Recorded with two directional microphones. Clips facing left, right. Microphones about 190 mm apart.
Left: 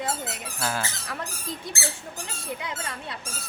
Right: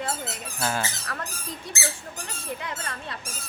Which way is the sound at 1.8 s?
20° right (ahead or behind).